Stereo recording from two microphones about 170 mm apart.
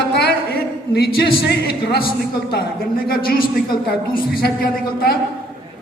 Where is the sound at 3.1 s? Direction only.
60° left (ahead or behind).